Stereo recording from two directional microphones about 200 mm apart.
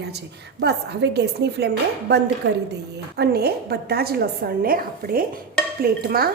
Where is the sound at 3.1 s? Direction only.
55° right (ahead or behind).